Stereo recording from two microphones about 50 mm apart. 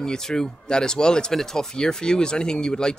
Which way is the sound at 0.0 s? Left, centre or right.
Centre.